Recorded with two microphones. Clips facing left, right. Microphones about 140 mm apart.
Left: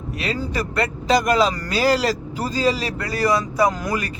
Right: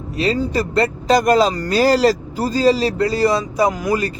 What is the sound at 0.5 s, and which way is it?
Speech, 30° right (ahead or behind).